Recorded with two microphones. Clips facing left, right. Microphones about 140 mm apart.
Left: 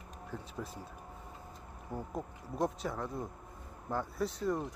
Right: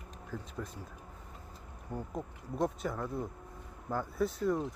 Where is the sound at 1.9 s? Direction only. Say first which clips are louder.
Even; centre (ahead or behind).